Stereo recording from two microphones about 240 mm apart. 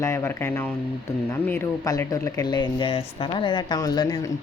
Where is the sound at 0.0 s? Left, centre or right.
Centre.